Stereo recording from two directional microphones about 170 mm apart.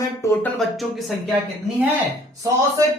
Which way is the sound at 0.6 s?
Centre (ahead or behind).